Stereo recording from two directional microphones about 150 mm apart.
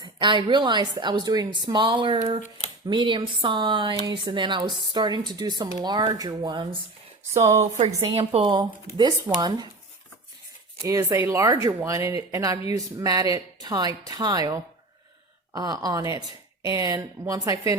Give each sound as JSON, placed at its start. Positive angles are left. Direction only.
{"t": 0.0, "sound": "a woman's voice", "side_deg": -30}
{"t": 7.5, "sound": "a woman's voice", "side_deg": -45}
{"t": 10.8, "sound": "speech", "side_deg": -20}